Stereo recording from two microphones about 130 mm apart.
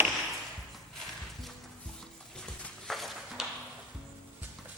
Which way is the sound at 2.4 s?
5° left (ahead or behind).